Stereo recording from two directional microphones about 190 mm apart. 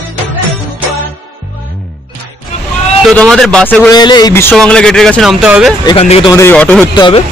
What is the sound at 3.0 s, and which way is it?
Speech, centre (ahead or behind).